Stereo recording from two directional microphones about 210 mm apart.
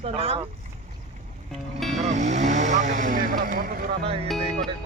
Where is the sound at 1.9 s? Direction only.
35° right (ahead or behind).